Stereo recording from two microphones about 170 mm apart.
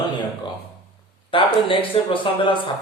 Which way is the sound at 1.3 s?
30° left (ahead or behind).